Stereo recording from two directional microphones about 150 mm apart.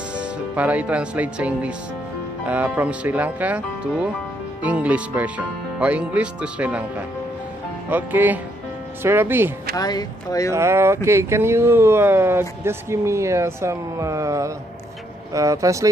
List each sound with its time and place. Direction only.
0.1 s speech: 10° right (ahead or behind)
9.8 s speech: 25° left (ahead or behind)
10.5 s speech: 15° right (ahead or behind)